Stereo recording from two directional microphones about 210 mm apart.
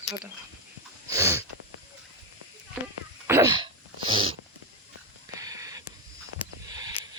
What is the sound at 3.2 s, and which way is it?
Dog, 15° right (ahead or behind).